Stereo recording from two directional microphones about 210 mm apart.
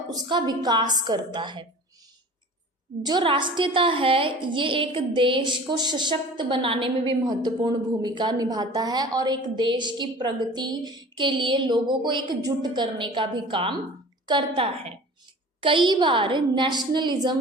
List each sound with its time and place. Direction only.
0.1 s a woman's voice: 20° right (ahead or behind)
3.0 s a woman's voice: 20° right (ahead or behind)